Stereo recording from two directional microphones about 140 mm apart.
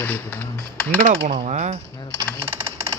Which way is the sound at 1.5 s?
55° right (ahead or behind).